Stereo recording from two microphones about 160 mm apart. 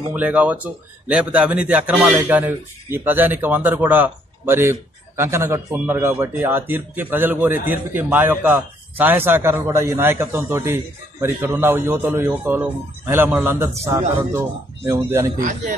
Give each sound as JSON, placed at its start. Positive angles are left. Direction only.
{"t": 0.1, "sound": "a man's voice", "side_deg": -10}
{"t": 15.3, "sound": "a man's voice", "side_deg": -55}